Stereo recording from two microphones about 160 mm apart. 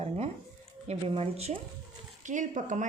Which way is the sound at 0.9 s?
40° right (ahead or behind).